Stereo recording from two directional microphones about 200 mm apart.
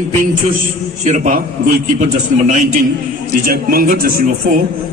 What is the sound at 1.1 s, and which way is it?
A man's voice, 40° right (ahead or behind).